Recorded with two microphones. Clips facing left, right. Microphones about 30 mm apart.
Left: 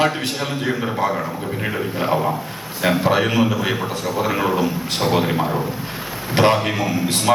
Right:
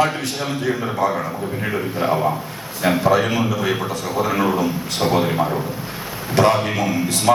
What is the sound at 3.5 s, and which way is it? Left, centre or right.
A man's voice, left.